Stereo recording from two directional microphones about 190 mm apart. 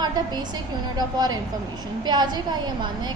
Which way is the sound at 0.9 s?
20° right (ahead or behind).